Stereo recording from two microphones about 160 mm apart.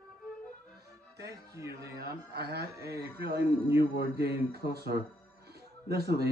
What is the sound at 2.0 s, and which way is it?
Speech, 90° right.